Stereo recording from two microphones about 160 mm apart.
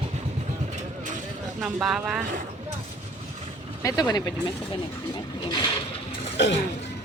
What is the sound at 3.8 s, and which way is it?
Speech, 20° left (ahead or behind).